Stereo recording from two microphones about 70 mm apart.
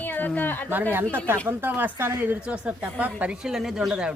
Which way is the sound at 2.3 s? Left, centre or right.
Right.